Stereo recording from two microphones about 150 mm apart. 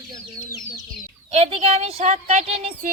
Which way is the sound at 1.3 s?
40° right (ahead or behind).